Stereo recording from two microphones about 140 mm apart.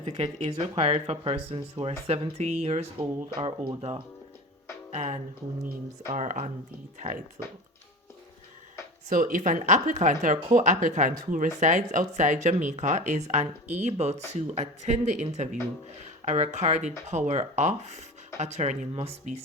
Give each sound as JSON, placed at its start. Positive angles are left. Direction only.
{"t": 0.0, "sound": "speech", "side_deg": -50}
{"t": 3.3, "sound": "speech", "side_deg": -35}
{"t": 4.9, "sound": "speech", "side_deg": -55}
{"t": 9.0, "sound": "speech", "side_deg": -65}